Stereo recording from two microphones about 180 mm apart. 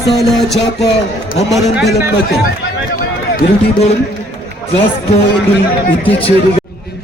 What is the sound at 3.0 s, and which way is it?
Run, 55° left (ahead or behind).